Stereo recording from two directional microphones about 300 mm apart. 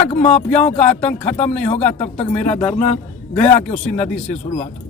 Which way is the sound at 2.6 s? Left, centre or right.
Centre.